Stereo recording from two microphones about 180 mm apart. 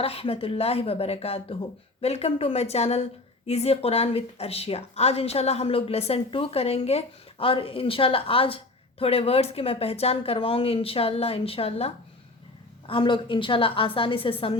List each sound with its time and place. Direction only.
0.0 s a woman's voice: 35° left (ahead or behind)